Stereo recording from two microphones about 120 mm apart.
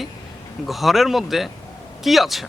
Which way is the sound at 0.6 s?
Centre (ahead or behind).